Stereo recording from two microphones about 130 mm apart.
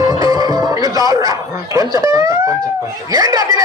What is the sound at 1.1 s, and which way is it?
Speech, 25° right (ahead or behind).